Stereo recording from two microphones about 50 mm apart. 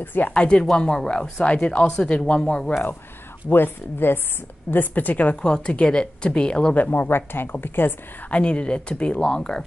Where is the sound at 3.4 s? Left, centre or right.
Left.